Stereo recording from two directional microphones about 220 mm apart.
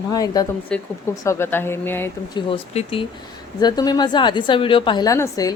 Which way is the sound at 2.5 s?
25° left (ahead or behind).